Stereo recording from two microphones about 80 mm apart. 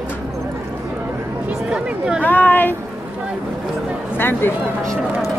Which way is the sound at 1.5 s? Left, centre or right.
Centre.